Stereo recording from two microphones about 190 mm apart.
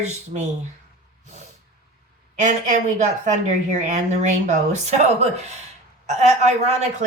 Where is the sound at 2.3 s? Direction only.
40° right (ahead or behind).